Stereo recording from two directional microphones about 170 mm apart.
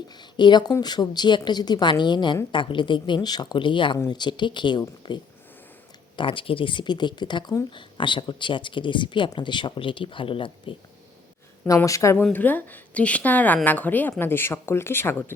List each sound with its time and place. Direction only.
0.1 s speech: 25° left (ahead or behind)
11.6 s a woman's voice: 15° left (ahead or behind)